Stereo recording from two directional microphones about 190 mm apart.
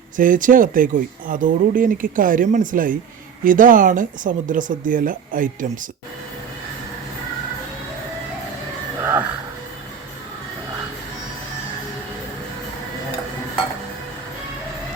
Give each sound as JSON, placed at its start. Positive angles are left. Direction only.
{"t": 0.2, "sound": "speech", "side_deg": -45}
{"t": 9.0, "sound": "music", "side_deg": -10}